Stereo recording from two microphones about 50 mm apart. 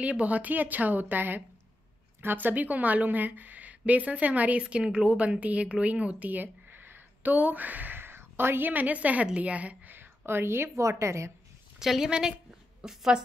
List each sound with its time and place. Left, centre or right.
0.0 s a woman's voice: right
5.2 s speech: right
7.3 s a woman's voice: right
8.0 s a woman's voice: right
9.9 s a sound: right
10.8 s a woman's voice: right
11.8 s a woman's voice: centre